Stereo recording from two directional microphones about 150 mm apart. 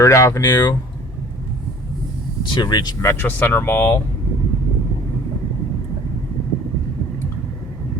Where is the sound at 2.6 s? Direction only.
30° left (ahead or behind).